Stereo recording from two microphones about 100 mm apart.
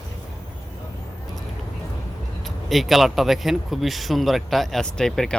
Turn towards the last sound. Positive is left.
turn(degrees=5)  # may be behind; listen again after turning